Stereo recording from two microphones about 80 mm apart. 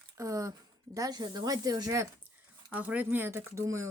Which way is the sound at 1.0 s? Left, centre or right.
Right.